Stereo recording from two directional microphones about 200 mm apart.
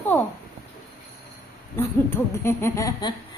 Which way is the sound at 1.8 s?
10° left (ahead or behind).